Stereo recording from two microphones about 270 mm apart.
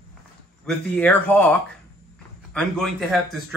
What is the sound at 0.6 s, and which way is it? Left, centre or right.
Speech, centre.